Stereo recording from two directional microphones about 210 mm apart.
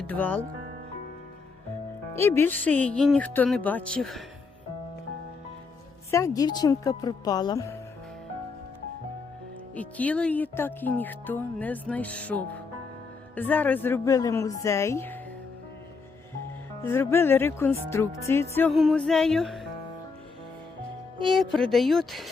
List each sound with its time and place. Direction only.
0.0 s speech: 10° left (ahead or behind)
2.1 s speech: 10° left (ahead or behind)
6.1 s speech: 15° left (ahead or behind)
9.7 s speech: 5° left (ahead or behind)
16.8 s speech: 10° left (ahead or behind)
18.5 s music: 5° left (ahead or behind)
21.3 s music: centre (ahead or behind)